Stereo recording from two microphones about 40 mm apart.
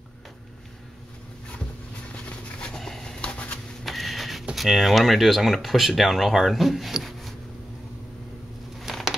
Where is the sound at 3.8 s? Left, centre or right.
Centre.